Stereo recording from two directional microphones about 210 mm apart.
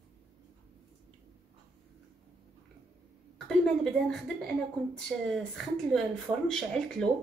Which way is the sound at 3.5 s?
5° left (ahead or behind).